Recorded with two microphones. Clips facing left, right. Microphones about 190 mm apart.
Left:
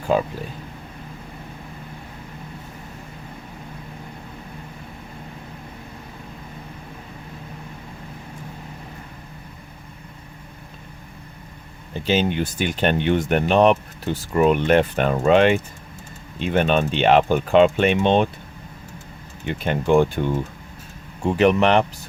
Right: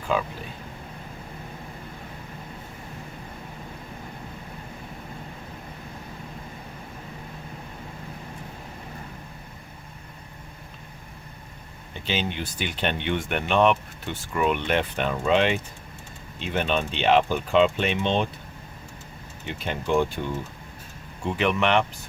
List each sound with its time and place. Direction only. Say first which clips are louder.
12.0 s speech: left 8 dB; 45° left (ahead or behind)
19.5 s speech: left 7 dB; 55° left (ahead or behind)
21.2 s speech: left 7 dB; 40° left (ahead or behind)